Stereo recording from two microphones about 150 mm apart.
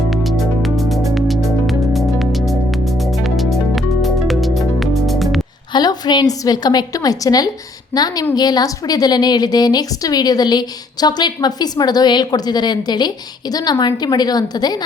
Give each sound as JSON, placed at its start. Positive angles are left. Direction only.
{"t": 0.1, "sound": "music", "side_deg": 0}
{"t": 5.7, "sound": "a woman's voice", "side_deg": 30}